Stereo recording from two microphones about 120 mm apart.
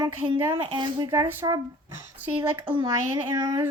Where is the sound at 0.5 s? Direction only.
45° right (ahead or behind).